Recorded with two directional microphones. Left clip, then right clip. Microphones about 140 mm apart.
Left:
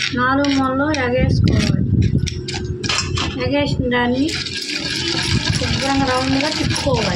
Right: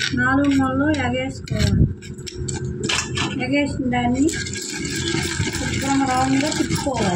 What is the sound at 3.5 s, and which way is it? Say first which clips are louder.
Speech: left 3 dB; 25° left (ahead or behind).